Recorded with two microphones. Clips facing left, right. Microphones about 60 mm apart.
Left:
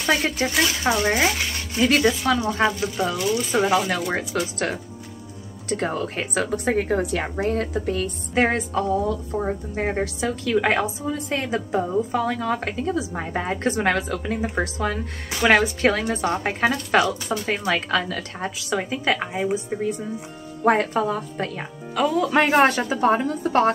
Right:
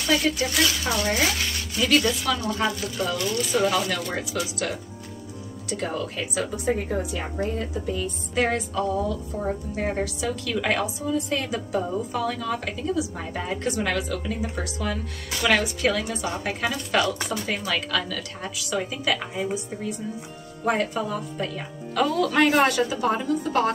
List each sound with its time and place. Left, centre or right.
0.0 s a woman's voice: left
4.1 s a woman's voice: left
8.4 s a woman's voice: left
21.9 s speech: centre
22.2 s a woman's voice: left